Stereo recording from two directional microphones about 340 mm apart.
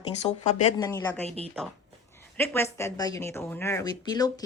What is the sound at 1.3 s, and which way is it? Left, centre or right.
Speech, centre.